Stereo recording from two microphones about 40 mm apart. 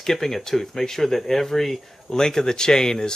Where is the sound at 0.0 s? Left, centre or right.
Centre.